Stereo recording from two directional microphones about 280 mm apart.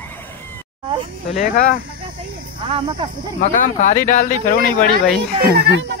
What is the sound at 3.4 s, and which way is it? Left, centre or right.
Speech, left.